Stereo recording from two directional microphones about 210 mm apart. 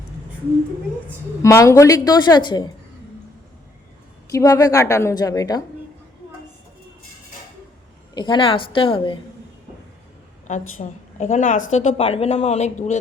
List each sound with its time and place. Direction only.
1.4 s a woman's voice: 15° left (ahead or behind)
4.3 s a woman's voice: 15° left (ahead or behind)
8.1 s a woman's voice: 20° left (ahead or behind)
10.8 s a woman's voice: 35° left (ahead or behind)